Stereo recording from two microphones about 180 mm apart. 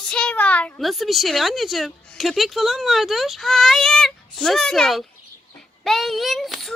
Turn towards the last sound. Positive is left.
turn(degrees=0)  # may be behind; listen again after turning